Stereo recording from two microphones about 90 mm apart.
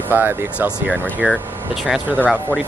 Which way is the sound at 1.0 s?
10° left (ahead or behind).